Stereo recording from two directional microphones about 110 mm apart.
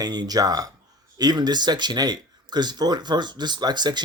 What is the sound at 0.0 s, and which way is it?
Speech, 40° right (ahead or behind).